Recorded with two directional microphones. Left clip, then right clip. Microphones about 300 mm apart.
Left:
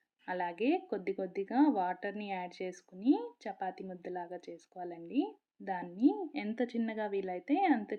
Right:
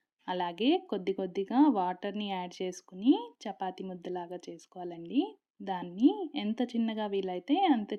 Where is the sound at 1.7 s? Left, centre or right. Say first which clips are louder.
Right 3 dB; right.